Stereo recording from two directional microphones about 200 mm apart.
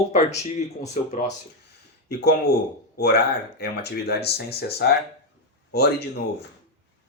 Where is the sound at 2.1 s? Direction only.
55° left (ahead or behind).